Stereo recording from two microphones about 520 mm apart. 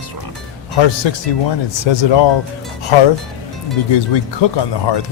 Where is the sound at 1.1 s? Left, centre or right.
Left.